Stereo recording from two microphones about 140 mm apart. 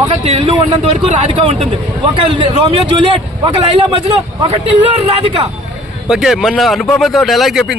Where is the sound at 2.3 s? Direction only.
40° right (ahead or behind).